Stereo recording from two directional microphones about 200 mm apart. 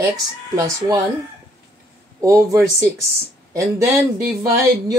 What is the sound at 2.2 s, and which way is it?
Speech, 15° right (ahead or behind).